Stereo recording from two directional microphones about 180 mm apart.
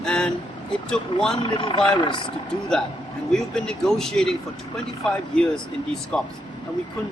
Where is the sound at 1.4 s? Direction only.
25° left (ahead or behind).